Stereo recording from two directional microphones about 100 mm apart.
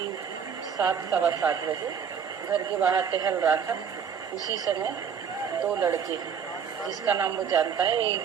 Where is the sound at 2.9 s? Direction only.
40° right (ahead or behind).